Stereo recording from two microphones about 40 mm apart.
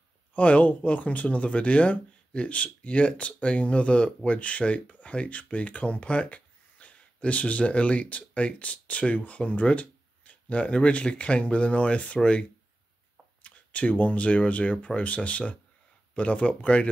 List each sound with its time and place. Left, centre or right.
0.4 s speech: left